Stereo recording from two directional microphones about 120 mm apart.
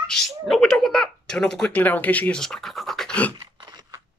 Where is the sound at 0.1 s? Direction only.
5° left (ahead or behind).